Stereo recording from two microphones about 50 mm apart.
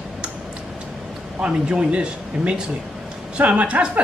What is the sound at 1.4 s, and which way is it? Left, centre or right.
Speech, right.